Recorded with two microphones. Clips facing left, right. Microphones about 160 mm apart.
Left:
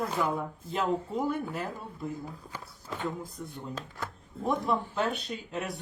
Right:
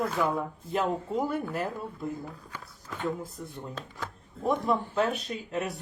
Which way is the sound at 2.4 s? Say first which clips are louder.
Left 2 dB; 25° left (ahead or behind).